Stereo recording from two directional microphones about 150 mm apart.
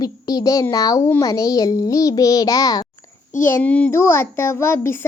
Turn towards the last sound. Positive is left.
turn(degrees=15)  # may be behind; listen again after turning